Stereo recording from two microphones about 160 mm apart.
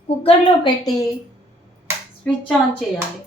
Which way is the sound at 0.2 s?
35° left (ahead or behind).